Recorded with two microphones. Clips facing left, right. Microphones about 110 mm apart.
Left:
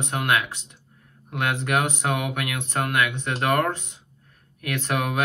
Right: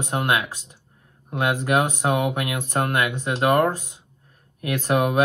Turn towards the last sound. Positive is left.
turn(degrees=-25)  # may be behind; listen again after turning